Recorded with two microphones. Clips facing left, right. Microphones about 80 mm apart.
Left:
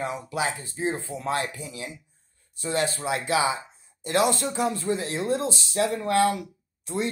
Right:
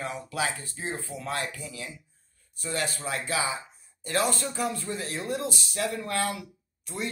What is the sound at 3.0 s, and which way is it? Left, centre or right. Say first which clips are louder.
Speech: left 6 dB; left.